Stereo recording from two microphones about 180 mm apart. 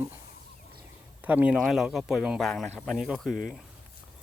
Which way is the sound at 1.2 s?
10° right (ahead or behind).